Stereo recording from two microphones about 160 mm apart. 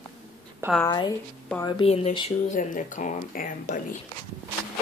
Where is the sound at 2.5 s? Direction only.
55° left (ahead or behind).